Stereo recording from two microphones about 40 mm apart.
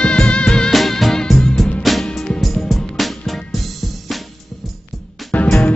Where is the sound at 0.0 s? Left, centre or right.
Left.